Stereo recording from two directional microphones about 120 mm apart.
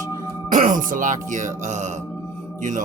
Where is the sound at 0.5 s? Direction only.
90° right.